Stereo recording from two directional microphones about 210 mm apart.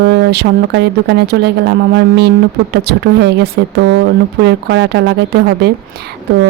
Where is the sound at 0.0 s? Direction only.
50° right (ahead or behind).